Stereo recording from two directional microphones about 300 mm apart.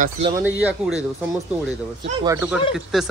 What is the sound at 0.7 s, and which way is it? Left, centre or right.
Speech, centre.